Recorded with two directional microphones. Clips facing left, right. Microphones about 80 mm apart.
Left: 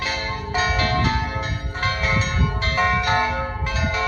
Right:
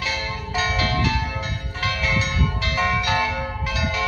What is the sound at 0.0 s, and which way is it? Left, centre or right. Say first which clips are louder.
Music: left 1 dB; left.